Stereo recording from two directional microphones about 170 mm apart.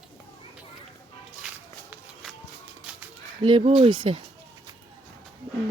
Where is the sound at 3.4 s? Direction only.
30° right (ahead or behind).